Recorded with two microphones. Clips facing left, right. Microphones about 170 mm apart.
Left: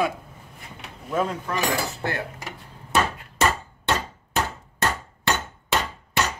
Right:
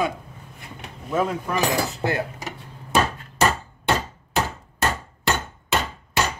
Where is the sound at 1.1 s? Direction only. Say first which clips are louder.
Right 2 dB; 5° right (ahead or behind).